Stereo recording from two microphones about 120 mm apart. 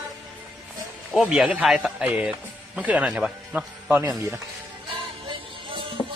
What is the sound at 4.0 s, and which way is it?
Speech, 25° right (ahead or behind).